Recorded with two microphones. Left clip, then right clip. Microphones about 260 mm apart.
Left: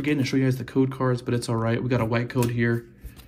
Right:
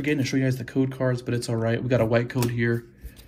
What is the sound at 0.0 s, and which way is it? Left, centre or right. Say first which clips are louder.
Speech: left 1 dB; centre.